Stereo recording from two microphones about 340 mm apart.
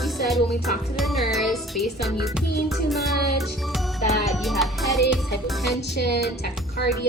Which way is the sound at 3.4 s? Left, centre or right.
Centre.